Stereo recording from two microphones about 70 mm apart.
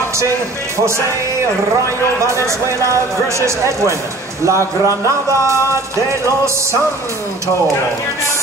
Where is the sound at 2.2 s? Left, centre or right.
Right.